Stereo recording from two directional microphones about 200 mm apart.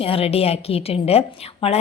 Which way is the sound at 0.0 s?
30° left (ahead or behind).